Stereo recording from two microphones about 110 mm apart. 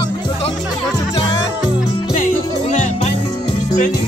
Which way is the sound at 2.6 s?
80° left.